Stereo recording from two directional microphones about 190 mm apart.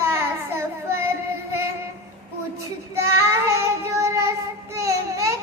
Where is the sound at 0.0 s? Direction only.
15° right (ahead or behind).